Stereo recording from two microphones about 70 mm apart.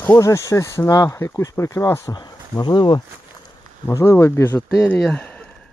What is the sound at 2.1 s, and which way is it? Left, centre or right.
Speech, left.